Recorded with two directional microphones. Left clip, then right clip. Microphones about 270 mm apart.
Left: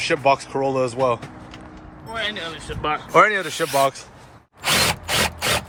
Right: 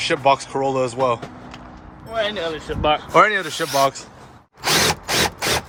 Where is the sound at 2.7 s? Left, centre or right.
Right.